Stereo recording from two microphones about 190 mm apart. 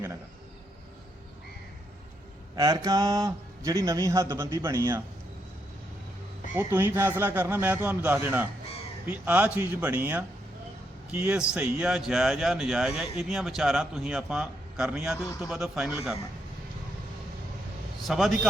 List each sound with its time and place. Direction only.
2.6 s speech: 20° right (ahead or behind)
6.6 s speech: 15° right (ahead or behind)
18.0 s a man's voice: centre (ahead or behind)